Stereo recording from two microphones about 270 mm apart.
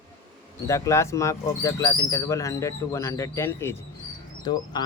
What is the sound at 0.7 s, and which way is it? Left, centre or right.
Speech, centre.